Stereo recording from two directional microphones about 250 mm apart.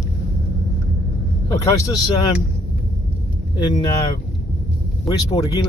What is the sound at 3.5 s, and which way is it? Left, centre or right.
Speech, centre.